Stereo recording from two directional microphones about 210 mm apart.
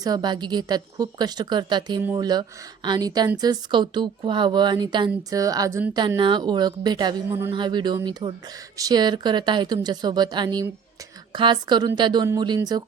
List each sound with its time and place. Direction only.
0.0 s speech: 20° right (ahead or behind)